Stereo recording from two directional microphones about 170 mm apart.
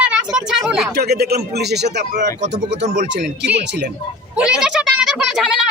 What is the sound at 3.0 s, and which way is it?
Speech, 90° right.